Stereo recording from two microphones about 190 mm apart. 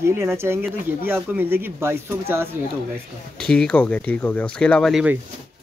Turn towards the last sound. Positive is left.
turn(degrees=0)  # may be behind; listen again after turning